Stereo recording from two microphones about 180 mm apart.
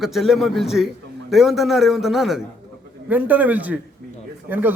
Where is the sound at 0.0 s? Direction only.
Centre (ahead or behind).